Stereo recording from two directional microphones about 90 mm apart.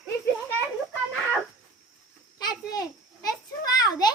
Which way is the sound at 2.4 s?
50° left (ahead or behind).